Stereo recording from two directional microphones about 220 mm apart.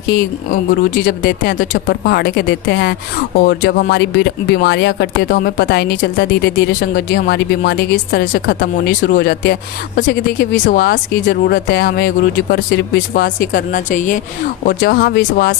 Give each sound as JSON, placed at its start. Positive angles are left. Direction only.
{"t": 0.7, "sound": "speech", "side_deg": 45}